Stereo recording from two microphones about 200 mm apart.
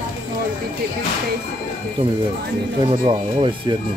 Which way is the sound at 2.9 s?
25° right (ahead or behind).